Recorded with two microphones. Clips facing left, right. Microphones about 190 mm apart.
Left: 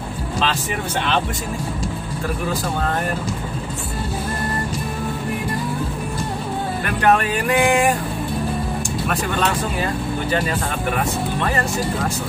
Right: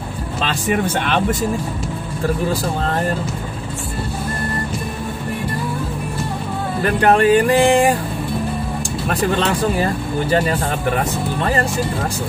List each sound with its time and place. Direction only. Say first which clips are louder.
6.8 s music: right 4 dB; 35° right (ahead or behind)
9.0 s music: right 4 dB; 35° right (ahead or behind)